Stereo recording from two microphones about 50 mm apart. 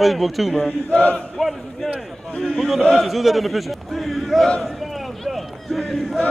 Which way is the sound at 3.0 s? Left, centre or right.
Centre.